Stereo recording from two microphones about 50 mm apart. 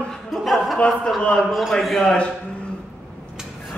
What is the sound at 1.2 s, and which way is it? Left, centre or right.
A man's voice, centre.